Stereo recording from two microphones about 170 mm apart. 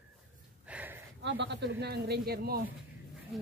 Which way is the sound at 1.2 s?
90° right.